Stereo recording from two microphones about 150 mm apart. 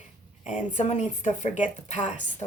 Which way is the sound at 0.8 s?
50° left (ahead or behind).